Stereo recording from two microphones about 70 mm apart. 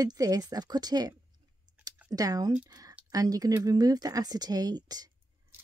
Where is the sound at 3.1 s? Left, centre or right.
Right.